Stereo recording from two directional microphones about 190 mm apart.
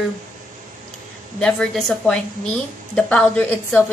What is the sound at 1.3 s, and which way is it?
A woman's voice, 5° left (ahead or behind).